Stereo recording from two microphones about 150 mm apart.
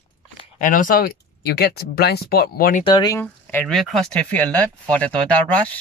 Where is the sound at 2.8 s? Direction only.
30° left (ahead or behind).